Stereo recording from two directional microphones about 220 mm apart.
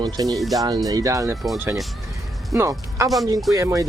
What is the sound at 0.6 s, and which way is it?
Speech, 15° right (ahead or behind).